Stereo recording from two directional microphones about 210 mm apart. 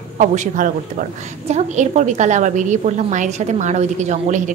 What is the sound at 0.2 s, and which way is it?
A woman's voice, 35° right (ahead or behind).